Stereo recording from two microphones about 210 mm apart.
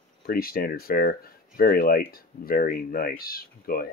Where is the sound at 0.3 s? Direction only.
45° left (ahead or behind).